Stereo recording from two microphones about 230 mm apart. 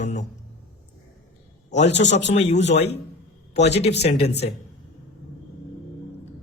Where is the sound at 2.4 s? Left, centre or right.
Left.